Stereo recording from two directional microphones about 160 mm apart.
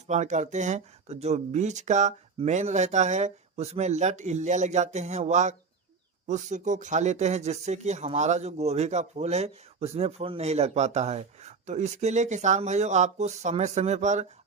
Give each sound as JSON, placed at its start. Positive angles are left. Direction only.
{"t": 0.1, "sound": "speech", "side_deg": -45}